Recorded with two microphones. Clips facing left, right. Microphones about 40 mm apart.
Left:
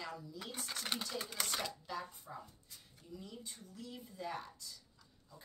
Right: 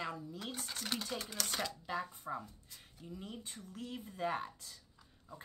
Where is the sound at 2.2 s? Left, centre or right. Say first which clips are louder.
Right 7 dB; right.